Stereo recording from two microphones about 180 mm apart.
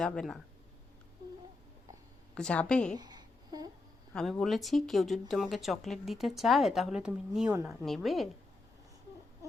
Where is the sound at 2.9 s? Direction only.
20° right (ahead or behind).